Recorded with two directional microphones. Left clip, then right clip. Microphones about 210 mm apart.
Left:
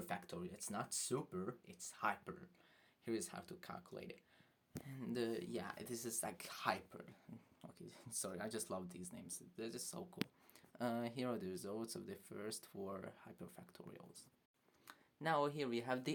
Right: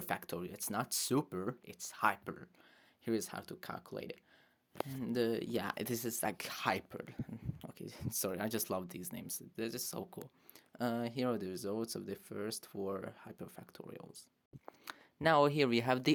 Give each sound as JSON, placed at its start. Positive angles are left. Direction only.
{"t": 0.0, "sound": "speech", "side_deg": -40}
{"t": 10.7, "sound": "speech", "side_deg": -25}
{"t": 14.8, "sound": "speech", "side_deg": -45}